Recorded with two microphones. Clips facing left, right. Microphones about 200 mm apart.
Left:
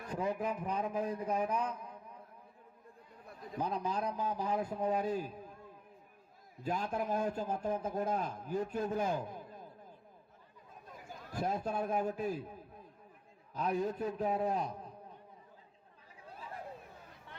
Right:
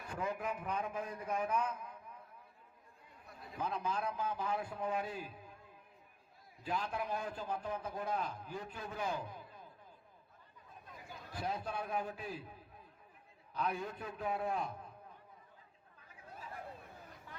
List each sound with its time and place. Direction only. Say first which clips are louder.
0.1 s a man's voice: left 4 dB; 35° left (ahead or behind)
3.6 s a man's voice: left 3 dB; 40° left (ahead or behind)
6.6 s a man's voice: left 3 dB; 45° left (ahead or behind)
11.0 s a man's voice: left 4 dB; 45° left (ahead or behind)